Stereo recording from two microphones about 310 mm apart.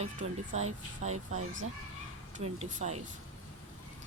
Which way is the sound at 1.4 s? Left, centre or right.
Right.